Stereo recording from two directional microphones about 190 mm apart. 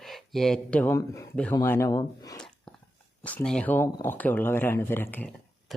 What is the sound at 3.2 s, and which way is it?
Speech, 10° left (ahead or behind).